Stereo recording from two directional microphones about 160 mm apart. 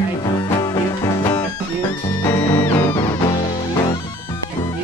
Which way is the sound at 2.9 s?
25° left (ahead or behind).